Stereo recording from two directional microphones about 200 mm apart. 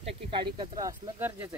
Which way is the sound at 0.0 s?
25° right (ahead or behind).